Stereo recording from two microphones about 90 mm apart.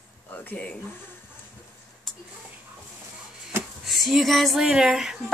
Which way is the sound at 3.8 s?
Centre (ahead or behind).